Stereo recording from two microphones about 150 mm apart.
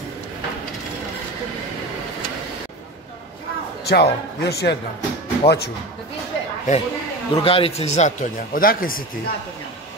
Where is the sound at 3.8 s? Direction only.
90° left.